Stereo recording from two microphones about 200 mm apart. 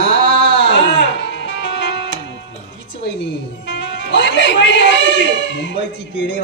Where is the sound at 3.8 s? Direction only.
60° left (ahead or behind).